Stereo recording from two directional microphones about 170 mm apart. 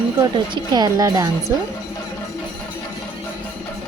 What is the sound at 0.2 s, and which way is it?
Speech, 25° right (ahead or behind).